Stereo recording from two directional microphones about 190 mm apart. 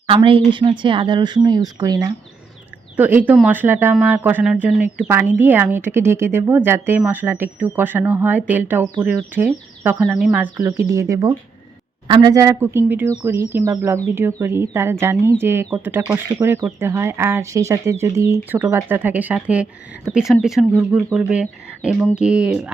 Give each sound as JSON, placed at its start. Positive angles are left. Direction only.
{"t": 0.3, "sound": "a woman's voice", "side_deg": -25}
{"t": 2.9, "sound": "speech", "side_deg": -10}